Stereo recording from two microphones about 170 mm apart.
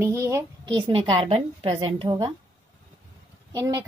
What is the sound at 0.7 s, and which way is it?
A woman's voice, 30° right (ahead or behind).